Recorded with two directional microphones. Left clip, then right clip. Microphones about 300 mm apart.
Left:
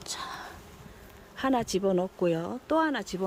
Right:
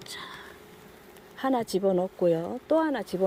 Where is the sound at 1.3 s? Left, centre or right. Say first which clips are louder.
Right 1 dB; centre.